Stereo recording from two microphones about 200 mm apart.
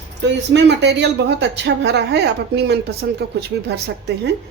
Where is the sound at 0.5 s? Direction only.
60° right (ahead or behind).